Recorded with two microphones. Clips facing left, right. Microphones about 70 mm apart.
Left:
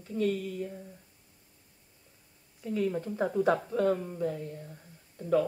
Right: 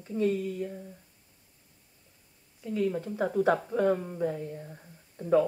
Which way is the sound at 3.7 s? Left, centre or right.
Centre.